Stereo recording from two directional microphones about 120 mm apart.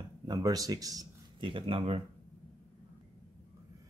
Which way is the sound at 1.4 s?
45° right (ahead or behind).